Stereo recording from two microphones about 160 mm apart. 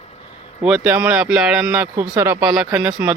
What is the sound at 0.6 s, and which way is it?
A man's voice, 5° right (ahead or behind).